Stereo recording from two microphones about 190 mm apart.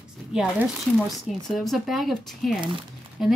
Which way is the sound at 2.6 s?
25° right (ahead or behind).